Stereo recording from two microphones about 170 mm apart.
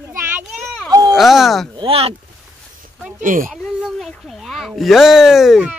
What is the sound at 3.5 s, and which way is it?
Speech, centre (ahead or behind).